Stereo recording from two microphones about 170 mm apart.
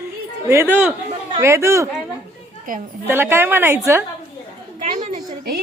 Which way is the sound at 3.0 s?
15° right (ahead or behind).